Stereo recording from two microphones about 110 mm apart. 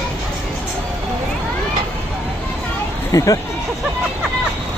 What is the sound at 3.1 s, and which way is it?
Speech, 30° left (ahead or behind).